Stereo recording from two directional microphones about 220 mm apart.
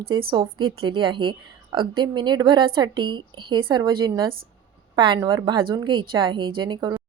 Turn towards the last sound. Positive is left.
turn(degrees=-20)  # may be behind; listen again after turning